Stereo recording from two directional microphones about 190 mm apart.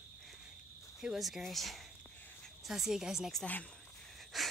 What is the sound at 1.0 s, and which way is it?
Speech, centre (ahead or behind).